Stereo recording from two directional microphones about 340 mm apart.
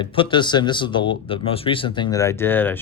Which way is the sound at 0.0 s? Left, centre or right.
Centre.